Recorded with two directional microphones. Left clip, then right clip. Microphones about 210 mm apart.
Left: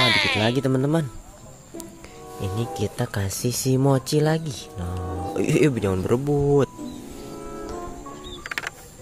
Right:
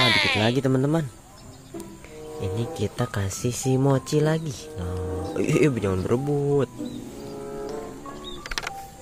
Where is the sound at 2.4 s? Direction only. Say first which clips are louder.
Left 1 dB; 5° left (ahead or behind).